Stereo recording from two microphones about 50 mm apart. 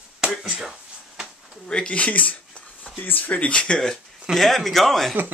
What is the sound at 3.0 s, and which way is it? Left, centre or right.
Speech, left.